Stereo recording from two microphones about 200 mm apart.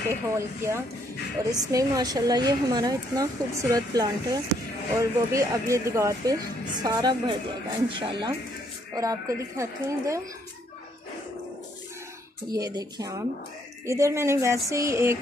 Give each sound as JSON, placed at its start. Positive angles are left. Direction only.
{"t": 0.1, "sound": "a woman's voice", "side_deg": -15}
{"t": 12.5, "sound": "speech", "side_deg": -20}